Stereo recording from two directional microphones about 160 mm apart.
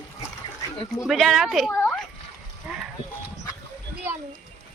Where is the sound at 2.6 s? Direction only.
10° right (ahead or behind).